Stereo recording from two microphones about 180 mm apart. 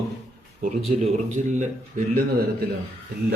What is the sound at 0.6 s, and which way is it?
Speech, 45° right (ahead or behind).